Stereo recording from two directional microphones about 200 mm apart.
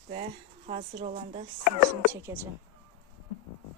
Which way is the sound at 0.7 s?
30° right (ahead or behind).